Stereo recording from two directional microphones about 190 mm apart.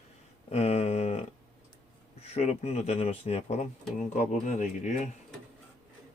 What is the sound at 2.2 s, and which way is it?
Speech, 35° left (ahead or behind).